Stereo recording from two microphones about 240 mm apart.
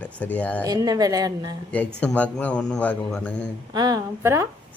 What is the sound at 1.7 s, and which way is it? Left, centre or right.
Speech, centre.